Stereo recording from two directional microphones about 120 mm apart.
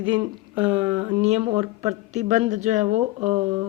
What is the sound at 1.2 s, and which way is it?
Speech, 60° right (ahead or behind).